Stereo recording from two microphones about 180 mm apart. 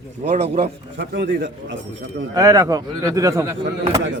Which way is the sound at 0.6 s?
70° right (ahead or behind).